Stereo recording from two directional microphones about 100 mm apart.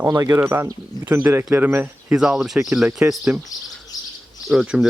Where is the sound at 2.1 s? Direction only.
5° right (ahead or behind).